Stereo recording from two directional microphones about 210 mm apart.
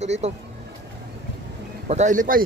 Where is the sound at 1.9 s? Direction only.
35° right (ahead or behind).